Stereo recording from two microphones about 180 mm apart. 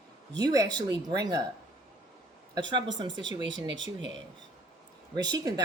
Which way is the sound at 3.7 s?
90° right.